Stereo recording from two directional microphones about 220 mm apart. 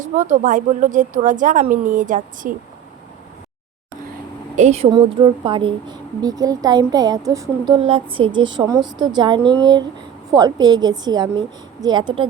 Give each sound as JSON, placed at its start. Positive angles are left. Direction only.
{"t": 0.0, "sound": "speech", "side_deg": -35}
{"t": 4.5, "sound": "speech", "side_deg": -30}